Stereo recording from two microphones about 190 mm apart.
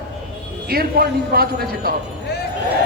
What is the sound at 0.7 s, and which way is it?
A man's voice, 55° right (ahead or behind).